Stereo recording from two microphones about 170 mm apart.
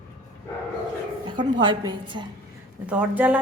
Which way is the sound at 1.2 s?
25° right (ahead or behind).